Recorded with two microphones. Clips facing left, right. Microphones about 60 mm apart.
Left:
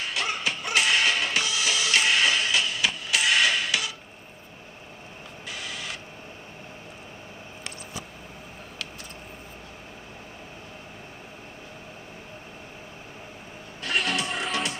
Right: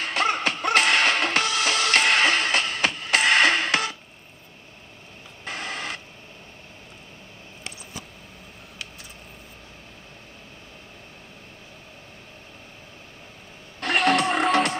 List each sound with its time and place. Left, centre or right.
0.0 s music: right
5.4 s printer: right
13.7 s music: right